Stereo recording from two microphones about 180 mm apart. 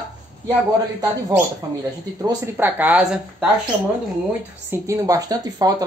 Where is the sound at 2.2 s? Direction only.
15° right (ahead or behind).